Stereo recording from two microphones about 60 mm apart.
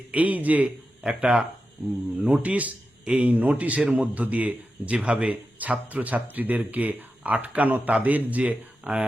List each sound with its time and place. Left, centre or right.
0.1 s a man's voice: right
1.8 s speech: centre
2.4 s a man's voice: right